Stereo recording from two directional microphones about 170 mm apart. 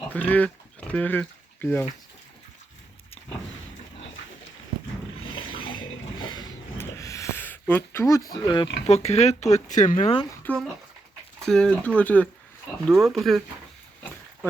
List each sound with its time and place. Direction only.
0.1 s speech: 10° left (ahead or behind)
5.2 s a sound: 30° left (ahead or behind)
8.9 s speech: 40° left (ahead or behind)
10.4 s speech: 5° left (ahead or behind)